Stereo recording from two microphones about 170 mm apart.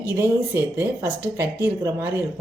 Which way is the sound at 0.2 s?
15° right (ahead or behind).